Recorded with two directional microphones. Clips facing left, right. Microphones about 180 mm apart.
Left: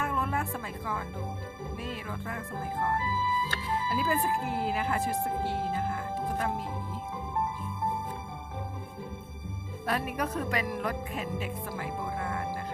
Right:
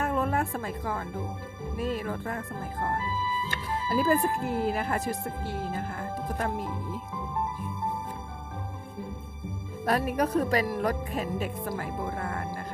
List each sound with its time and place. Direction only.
0.0 s music: 40° right (ahead or behind)
1.8 s speech: 45° right (ahead or behind)
3.8 s speech: 40° right (ahead or behind)
9.8 s speech: 40° right (ahead or behind)